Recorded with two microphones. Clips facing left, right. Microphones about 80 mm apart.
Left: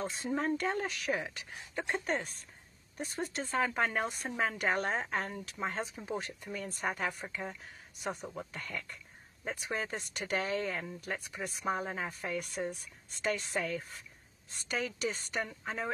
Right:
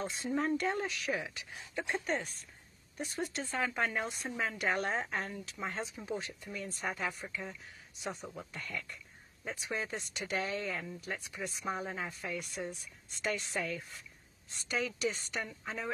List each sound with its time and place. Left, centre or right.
0.0 s speech: left
3.0 s speech: left
8.4 s speech: left